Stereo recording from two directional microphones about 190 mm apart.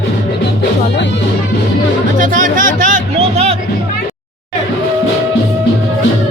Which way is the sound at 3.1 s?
30° right (ahead or behind).